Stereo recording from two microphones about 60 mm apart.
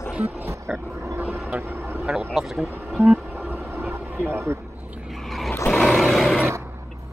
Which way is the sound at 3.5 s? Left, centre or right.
Right.